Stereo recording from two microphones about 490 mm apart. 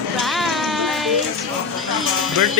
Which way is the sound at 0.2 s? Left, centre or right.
Centre.